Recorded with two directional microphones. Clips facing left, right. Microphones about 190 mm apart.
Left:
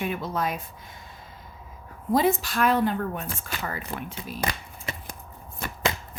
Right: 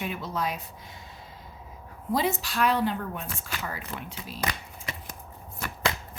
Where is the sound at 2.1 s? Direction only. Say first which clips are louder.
Left 5 dB; 50° left (ahead or behind).